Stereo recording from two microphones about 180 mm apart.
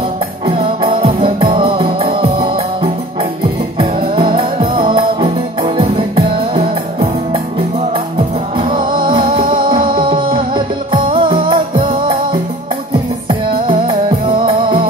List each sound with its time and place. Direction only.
0.5 s music: 30° right (ahead or behind)
8.5 s music: 25° right (ahead or behind)